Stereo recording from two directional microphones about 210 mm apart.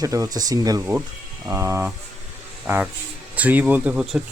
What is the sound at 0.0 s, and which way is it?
Speech, 15° right (ahead or behind).